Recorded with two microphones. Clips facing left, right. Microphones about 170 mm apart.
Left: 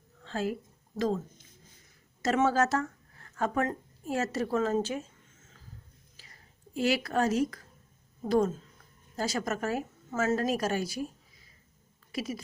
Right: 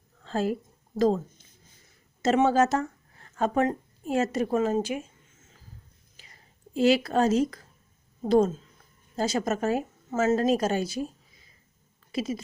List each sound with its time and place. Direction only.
0.3 s speech: 35° right (ahead or behind)
2.2 s a woman's voice: 20° right (ahead or behind)
6.7 s a woman's voice: 25° right (ahead or behind)
12.1 s speech: 25° right (ahead or behind)